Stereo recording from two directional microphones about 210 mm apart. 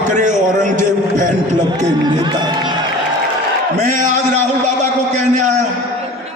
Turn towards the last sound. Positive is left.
turn(degrees=-35)  # may be behind; listen again after turning